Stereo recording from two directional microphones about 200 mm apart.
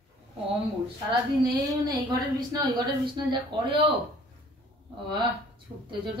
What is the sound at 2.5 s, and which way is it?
A man's voice, 20° right (ahead or behind).